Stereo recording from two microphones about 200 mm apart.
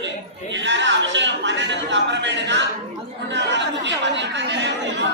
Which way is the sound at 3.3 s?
60° right (ahead or behind).